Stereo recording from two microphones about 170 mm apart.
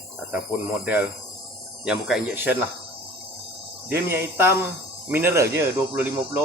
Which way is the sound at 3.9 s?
65° right (ahead or behind).